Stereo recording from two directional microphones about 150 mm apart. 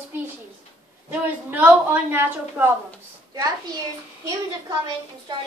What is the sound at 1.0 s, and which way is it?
A woman's voice, 10° right (ahead or behind).